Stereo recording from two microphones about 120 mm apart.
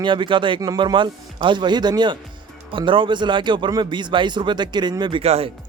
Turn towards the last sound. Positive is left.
turn(degrees=-60)  # may be behind; listen again after turning